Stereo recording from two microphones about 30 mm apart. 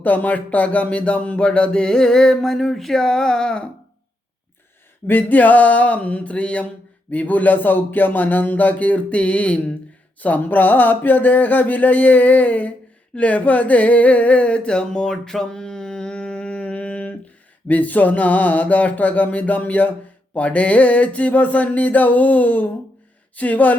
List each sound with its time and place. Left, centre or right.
0.0 s a sound: left
1.5 s music: left
2.4 s speech: centre
5.1 s mantra: left
7.1 s speech: left
8.7 s mantra: left
10.2 s mantra: left
14.7 s music: left
17.7 s a sound: left